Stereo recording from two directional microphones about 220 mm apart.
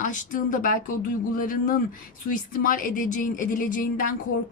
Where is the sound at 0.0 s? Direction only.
35° left (ahead or behind).